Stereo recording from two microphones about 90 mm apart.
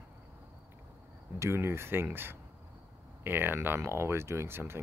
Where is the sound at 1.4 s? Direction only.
30° right (ahead or behind).